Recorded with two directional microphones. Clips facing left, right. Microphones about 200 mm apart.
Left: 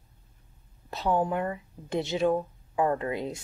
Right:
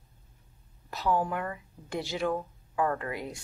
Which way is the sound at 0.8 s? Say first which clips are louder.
Left 2 dB; 25° left (ahead or behind).